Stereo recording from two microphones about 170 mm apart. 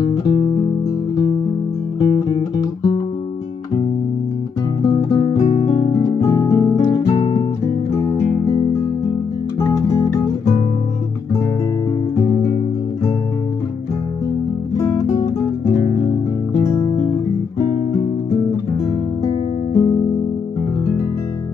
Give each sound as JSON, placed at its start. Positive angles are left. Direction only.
{"t": 0.0, "sound": "music", "side_deg": 25}
{"t": 2.0, "sound": "music", "side_deg": 25}
{"t": 4.8, "sound": "guitar", "side_deg": 30}
{"t": 6.0, "sound": "music", "side_deg": 20}
{"t": 9.6, "sound": "music", "side_deg": 20}
{"t": 14.8, "sound": "music", "side_deg": 25}
{"t": 19.7, "sound": "music", "side_deg": 20}